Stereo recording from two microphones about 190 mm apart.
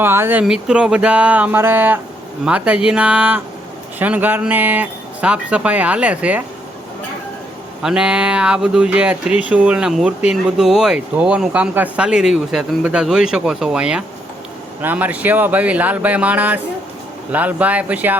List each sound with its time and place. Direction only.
0.0 s speech: 10° right (ahead or behind)
7.8 s speech: 5° right (ahead or behind)